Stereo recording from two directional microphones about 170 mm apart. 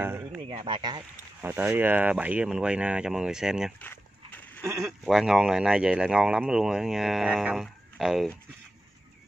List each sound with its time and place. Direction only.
0.0 s a sound: 15° right (ahead or behind)
0.4 s speech: 30° right (ahead or behind)
1.4 s speech: 10° right (ahead or behind)
3.8 s dog: 10° left (ahead or behind)
4.6 s speech: 15° right (ahead or behind)
5.0 s speech: 5° right (ahead or behind)